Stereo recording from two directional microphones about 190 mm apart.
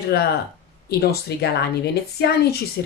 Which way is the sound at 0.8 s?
55° left (ahead or behind).